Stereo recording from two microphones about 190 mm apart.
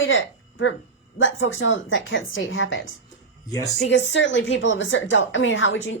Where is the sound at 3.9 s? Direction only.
75° left (ahead or behind).